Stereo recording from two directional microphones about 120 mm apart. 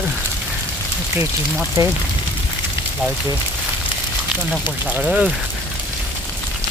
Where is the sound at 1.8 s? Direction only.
30° right (ahead or behind).